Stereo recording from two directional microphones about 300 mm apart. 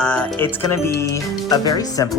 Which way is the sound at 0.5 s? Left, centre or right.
Centre.